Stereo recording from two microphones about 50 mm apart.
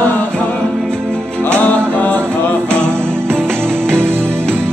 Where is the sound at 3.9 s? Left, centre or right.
Right.